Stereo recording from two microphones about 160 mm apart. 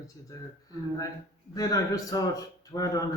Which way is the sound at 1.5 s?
20° left (ahead or behind).